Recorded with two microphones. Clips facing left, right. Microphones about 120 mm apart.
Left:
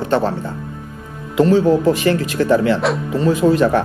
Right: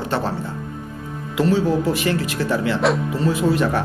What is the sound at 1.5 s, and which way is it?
Speech, 45° left (ahead or behind).